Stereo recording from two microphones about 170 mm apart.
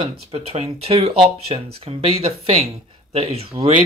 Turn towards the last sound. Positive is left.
turn(degrees=-35)  # may be behind; listen again after turning